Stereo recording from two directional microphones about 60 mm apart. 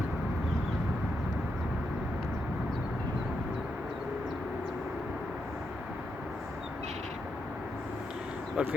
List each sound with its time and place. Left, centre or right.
8.6 s speech: centre